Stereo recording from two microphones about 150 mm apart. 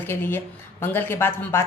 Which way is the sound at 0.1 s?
15° left (ahead or behind).